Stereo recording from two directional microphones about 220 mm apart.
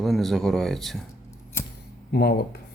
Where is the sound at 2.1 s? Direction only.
45° left (ahead or behind).